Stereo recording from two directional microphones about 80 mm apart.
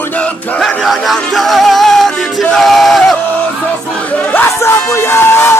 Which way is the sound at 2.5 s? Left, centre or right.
Centre.